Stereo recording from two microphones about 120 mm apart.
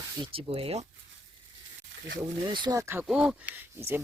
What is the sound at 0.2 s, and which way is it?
Speech, 50° right (ahead or behind).